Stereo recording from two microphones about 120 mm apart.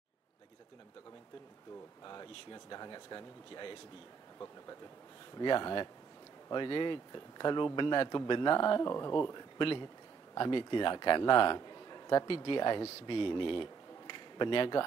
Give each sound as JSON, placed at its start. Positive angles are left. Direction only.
{"t": 2.0, "sound": "a man's voice", "side_deg": 35}
{"t": 5.4, "sound": "a man's voice", "side_deg": 40}